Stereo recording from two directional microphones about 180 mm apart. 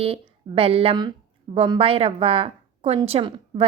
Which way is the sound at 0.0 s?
30° right (ahead or behind).